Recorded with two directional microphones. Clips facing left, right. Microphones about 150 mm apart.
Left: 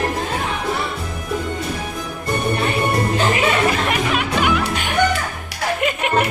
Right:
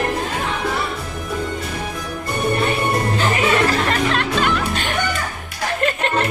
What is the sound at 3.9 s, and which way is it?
Music, 10° left (ahead or behind).